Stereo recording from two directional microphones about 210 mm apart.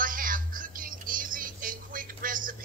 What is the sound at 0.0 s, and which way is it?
Music, 40° right (ahead or behind).